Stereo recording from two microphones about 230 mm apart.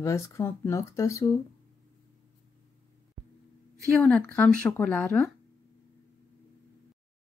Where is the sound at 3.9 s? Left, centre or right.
Centre.